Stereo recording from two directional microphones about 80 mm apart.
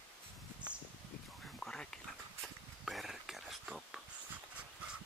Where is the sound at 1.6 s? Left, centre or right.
Centre.